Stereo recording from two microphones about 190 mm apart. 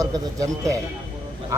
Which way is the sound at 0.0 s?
15° right (ahead or behind).